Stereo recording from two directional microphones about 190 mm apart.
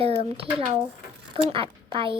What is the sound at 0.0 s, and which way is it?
A child's voice, 30° right (ahead or behind).